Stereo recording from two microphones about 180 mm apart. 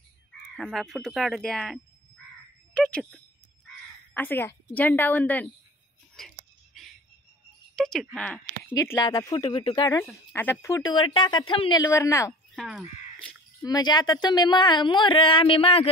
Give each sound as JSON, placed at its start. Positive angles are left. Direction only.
{"t": 0.6, "sound": "a woman's voice", "side_deg": 5}
{"t": 6.1, "sound": "a sound", "side_deg": 0}
{"t": 8.7, "sound": "a woman's voice", "side_deg": 15}
{"t": 12.5, "sound": "speech", "side_deg": 0}
{"t": 13.6, "sound": "a woman's voice", "side_deg": 20}